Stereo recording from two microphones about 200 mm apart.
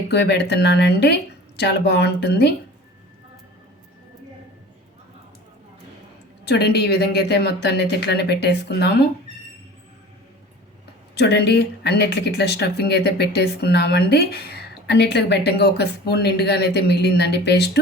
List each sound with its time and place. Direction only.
0.1 s speech: 55° left (ahead or behind)
6.4 s speech: 55° left (ahead or behind)
11.1 s speech: 55° left (ahead or behind)